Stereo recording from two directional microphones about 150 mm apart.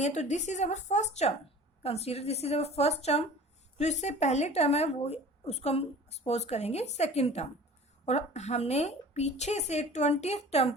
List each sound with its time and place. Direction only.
0.0 s a woman's voice: 50° left (ahead or behind)